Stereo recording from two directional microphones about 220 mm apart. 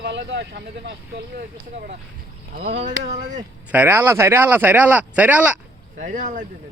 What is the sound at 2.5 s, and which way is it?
Speech, 35° right (ahead or behind).